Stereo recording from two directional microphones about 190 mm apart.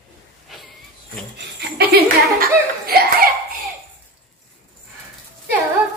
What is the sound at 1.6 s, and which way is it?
Speech, 55° right (ahead or behind).